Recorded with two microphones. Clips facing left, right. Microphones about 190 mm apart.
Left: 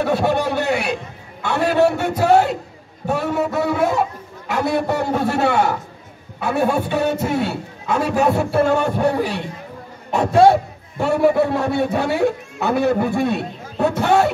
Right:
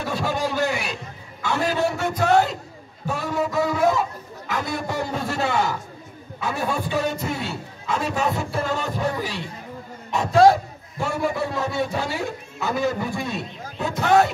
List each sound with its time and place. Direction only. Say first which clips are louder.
0.0 s a man's voice: left 7 dB; 65° left (ahead or behind)
10.5 s a man's voice: left 5 dB; 65° left (ahead or behind)